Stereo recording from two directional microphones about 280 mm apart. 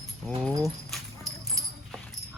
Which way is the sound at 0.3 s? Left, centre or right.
Centre.